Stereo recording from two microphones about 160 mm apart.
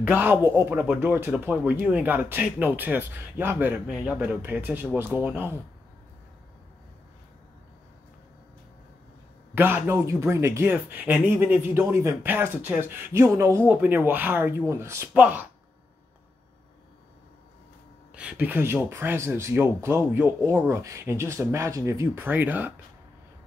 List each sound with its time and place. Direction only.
0.0 s speech: 10° right (ahead or behind)
9.6 s speech: 15° right (ahead or behind)
18.1 s speech: 10° right (ahead or behind)